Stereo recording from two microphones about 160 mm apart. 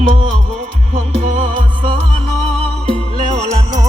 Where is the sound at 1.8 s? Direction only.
30° right (ahead or behind).